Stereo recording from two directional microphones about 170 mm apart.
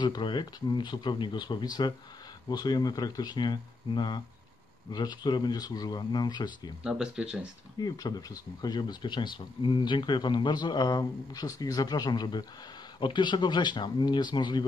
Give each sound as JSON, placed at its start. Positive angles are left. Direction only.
{"t": 0.0, "sound": "speech", "side_deg": 25}
{"t": 6.8, "sound": "speech", "side_deg": -5}
{"t": 7.8, "sound": "speech", "side_deg": 25}